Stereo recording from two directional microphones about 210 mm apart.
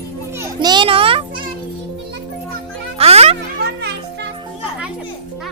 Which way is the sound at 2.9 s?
30° right (ahead or behind).